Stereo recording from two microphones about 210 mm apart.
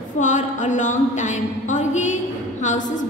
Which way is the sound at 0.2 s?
35° left (ahead or behind).